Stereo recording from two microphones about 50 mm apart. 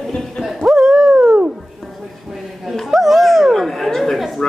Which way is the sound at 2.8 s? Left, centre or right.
Centre.